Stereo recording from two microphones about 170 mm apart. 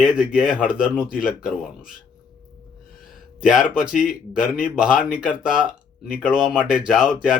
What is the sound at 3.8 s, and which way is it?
Speech, 5° right (ahead or behind).